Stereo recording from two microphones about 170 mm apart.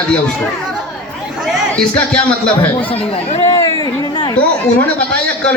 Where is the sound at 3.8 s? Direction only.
25° left (ahead or behind).